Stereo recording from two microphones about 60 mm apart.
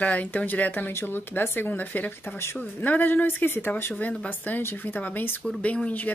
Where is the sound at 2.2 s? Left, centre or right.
Left.